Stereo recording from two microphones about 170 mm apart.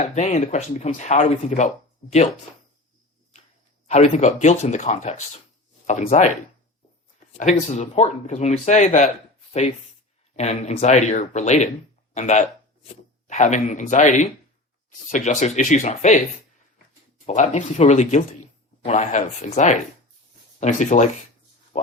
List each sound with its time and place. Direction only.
0.0 s speech: 40° left (ahead or behind)
3.8 s speech: 40° left (ahead or behind)
17.2 s speech: 45° left (ahead or behind)